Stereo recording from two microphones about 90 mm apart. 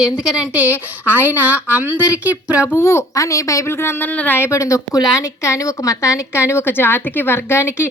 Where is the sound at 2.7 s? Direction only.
30° left (ahead or behind).